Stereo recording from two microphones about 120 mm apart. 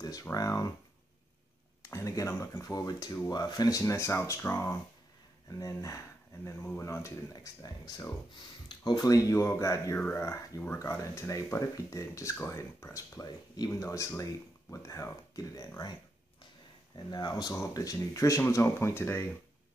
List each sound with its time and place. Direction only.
0.0 s speech: 30° left (ahead or behind)
1.9 s speech: 25° left (ahead or behind)